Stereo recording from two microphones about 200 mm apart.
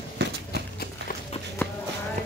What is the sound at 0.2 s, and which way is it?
Horse, 55° right (ahead or behind).